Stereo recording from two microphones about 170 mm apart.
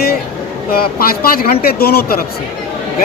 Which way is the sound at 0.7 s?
60° left (ahead or behind).